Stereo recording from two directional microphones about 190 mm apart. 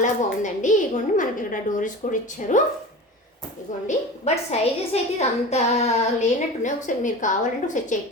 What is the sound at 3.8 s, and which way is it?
A woman's voice, 35° left (ahead or behind).